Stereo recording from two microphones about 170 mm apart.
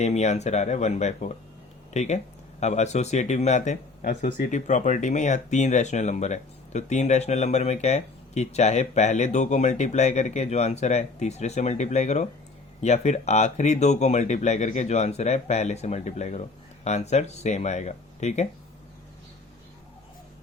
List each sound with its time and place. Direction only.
0.0 s speech: 40° left (ahead or behind)